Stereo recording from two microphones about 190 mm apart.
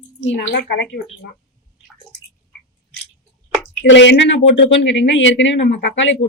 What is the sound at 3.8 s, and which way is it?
Speech, 75° left (ahead or behind).